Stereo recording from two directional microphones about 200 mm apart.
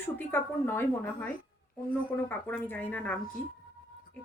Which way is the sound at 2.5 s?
10° left (ahead or behind).